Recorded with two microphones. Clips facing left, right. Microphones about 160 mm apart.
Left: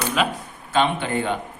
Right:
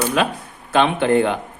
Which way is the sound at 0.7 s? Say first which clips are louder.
Right 5 dB; 60° right (ahead or behind).